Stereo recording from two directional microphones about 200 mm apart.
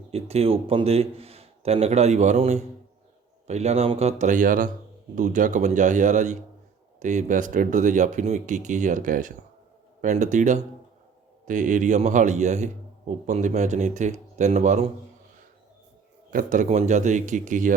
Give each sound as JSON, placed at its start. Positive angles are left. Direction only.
{"t": 0.1, "sound": "a man's voice", "side_deg": -30}
{"t": 16.3, "sound": "a man's voice", "side_deg": -40}